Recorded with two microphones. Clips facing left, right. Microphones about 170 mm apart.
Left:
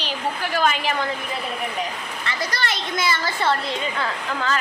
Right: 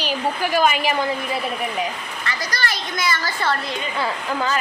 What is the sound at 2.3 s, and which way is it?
Speech, 25° left (ahead or behind).